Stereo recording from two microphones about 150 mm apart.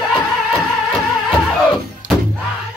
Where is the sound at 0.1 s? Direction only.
5° left (ahead or behind).